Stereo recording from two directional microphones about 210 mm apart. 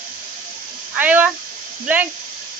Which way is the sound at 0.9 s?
10° right (ahead or behind).